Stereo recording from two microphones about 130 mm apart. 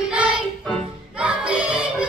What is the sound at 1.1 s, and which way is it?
Music, 10° right (ahead or behind).